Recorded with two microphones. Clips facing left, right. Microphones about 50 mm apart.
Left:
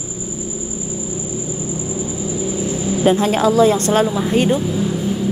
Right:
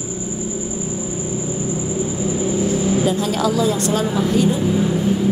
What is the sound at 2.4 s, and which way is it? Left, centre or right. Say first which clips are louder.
Vehicle: right 4 dB; right.